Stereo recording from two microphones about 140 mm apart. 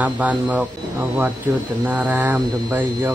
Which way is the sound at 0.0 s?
10° right (ahead or behind).